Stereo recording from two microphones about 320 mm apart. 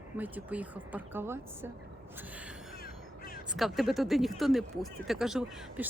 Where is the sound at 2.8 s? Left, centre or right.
Left.